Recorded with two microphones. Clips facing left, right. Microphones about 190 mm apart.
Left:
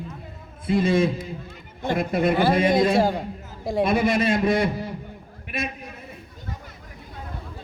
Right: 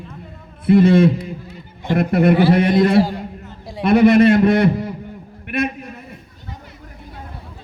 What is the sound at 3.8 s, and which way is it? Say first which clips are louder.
A man's voice: right 10 dB; 60° right (ahead or behind).